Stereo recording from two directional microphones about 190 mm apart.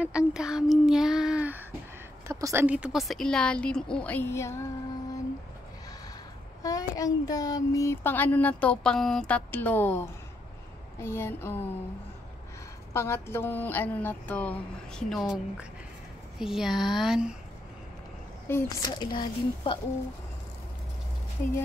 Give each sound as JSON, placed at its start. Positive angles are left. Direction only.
{"t": 0.0, "sound": "a woman's voice", "side_deg": -5}
{"t": 6.6, "sound": "speech", "side_deg": 20}
{"t": 12.9, "sound": "a woman's voice", "side_deg": 15}
{"t": 18.5, "sound": "speech", "side_deg": 15}